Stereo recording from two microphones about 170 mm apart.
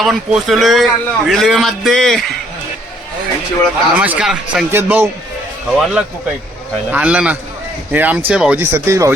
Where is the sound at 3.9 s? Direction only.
10° right (ahead or behind).